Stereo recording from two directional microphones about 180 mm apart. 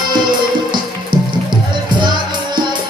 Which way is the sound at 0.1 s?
25° right (ahead or behind).